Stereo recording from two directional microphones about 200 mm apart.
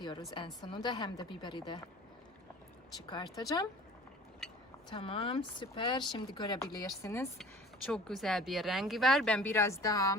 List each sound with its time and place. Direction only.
0.0 s speech: 20° left (ahead or behind)
3.1 s speech: 20° left (ahead or behind)
4.9 s speech: 25° left (ahead or behind)
7.9 s speech: 5° left (ahead or behind)